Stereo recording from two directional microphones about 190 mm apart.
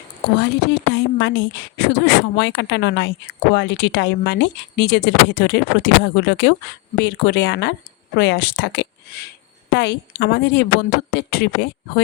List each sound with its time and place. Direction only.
0.3 s a woman's voice: 60° left (ahead or behind)